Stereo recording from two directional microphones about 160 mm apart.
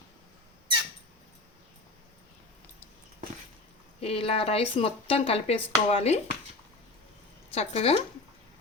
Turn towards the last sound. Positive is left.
turn(degrees=40)  # may be behind; listen again after turning